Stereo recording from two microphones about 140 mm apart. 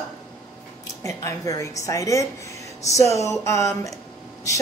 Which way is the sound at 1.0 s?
25° left (ahead or behind).